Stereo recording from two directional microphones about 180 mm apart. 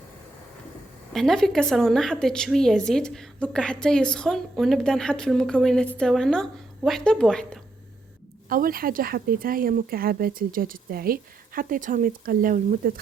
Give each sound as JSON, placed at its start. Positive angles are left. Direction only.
{"t": 1.1, "sound": "a woman's voice", "side_deg": 0}
{"t": 8.4, "sound": "speech", "side_deg": -55}